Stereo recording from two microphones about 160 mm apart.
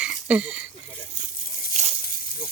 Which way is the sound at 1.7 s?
50° right (ahead or behind).